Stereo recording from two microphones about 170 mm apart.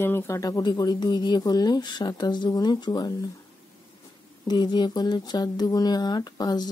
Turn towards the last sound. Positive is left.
turn(degrees=25)  # may be behind; listen again after turning